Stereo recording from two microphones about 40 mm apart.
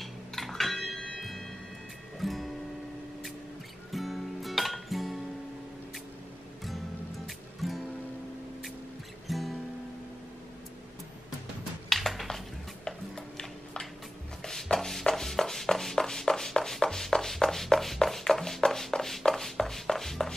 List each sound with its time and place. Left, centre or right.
0.0 s music: centre
3.9 s music: centre
7.2 s music: centre
9.3 s music: centre
11.9 s a sound: centre
12.8 s a sound: centre
14.4 s shuffle: centre